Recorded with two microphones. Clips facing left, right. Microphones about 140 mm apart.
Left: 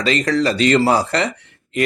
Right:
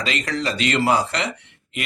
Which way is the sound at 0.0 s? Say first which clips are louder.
Left 8 dB; 35° left (ahead or behind).